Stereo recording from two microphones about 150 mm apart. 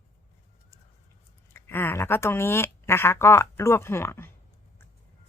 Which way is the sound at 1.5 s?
15° left (ahead or behind).